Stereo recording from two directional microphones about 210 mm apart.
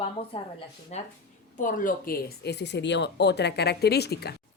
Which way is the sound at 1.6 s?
40° left (ahead or behind).